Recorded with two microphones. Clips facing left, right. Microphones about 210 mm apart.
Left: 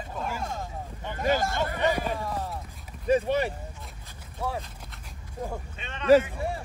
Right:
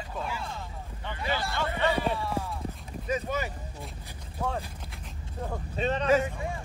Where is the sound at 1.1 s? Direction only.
45° left (ahead or behind).